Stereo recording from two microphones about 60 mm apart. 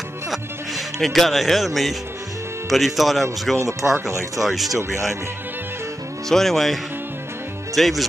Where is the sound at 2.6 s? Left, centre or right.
Centre.